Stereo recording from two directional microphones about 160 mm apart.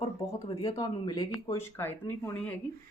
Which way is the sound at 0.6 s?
25° left (ahead or behind).